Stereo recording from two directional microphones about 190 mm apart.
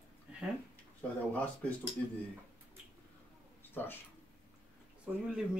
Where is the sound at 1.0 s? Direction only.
5° left (ahead or behind).